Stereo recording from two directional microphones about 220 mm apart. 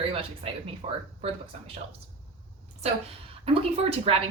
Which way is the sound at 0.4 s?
25° right (ahead or behind).